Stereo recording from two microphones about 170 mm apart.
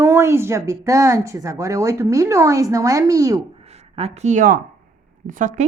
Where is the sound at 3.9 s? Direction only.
40° right (ahead or behind).